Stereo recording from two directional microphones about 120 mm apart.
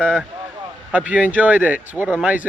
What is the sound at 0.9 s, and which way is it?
Speech, 10° right (ahead or behind).